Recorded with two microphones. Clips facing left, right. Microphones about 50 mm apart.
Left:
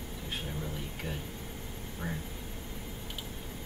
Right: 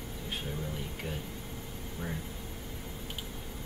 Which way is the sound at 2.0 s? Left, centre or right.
Centre.